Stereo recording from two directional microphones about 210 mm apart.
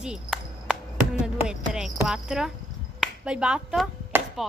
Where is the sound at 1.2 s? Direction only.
5° right (ahead or behind).